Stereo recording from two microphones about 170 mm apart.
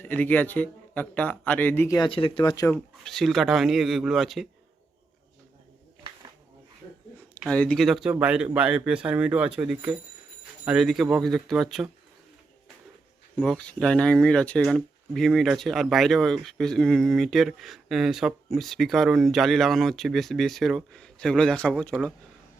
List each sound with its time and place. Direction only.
0.0 s speech: 10° left (ahead or behind)
2.0 s speech: 30° left (ahead or behind)
2.7 s speech: centre (ahead or behind)
7.4 s speech: 5° left (ahead or behind)
13.3 s speech: 5° left (ahead or behind)